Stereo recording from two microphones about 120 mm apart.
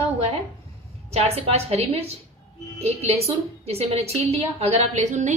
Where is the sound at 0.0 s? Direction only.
55° right (ahead or behind).